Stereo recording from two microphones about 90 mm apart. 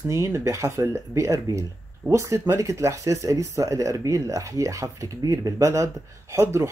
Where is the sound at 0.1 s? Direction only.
35° right (ahead or behind).